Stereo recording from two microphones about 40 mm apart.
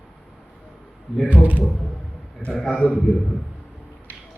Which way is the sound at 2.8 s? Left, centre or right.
Left.